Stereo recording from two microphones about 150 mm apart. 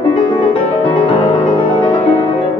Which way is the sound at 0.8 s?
35° left (ahead or behind).